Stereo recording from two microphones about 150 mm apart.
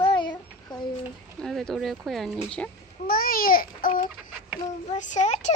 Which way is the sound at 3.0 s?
75° left (ahead or behind).